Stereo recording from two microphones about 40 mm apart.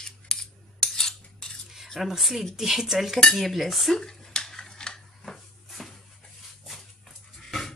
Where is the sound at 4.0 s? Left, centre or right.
Centre.